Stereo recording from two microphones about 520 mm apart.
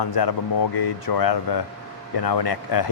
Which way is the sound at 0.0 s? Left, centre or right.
Left.